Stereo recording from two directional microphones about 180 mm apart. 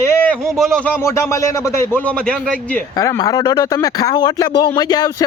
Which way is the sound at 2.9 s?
20° left (ahead or behind).